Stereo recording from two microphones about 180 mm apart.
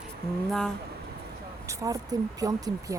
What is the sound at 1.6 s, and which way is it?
Speech, 20° right (ahead or behind).